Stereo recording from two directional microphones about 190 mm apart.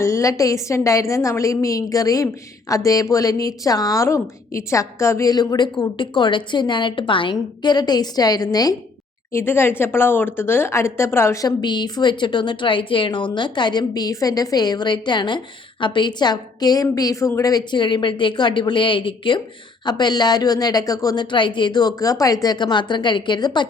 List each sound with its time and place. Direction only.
0.0 s a woman's voice: 15° left (ahead or behind)